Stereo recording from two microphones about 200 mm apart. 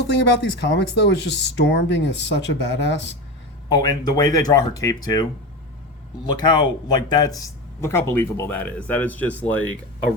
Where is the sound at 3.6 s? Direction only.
20° left (ahead or behind).